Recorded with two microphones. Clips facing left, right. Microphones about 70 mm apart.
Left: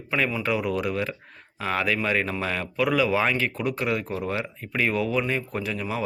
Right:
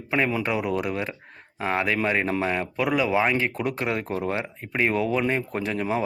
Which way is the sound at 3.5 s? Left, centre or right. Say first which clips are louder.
Even; right.